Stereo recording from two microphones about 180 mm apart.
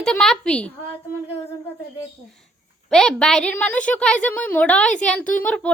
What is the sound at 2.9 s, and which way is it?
A woman's voice, centre (ahead or behind).